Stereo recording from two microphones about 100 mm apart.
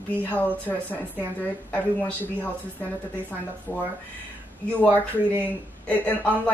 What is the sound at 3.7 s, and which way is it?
Speech, 25° left (ahead or behind).